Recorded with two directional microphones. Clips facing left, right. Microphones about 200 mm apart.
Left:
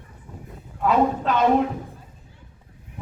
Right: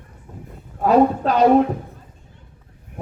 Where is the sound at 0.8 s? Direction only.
35° right (ahead or behind).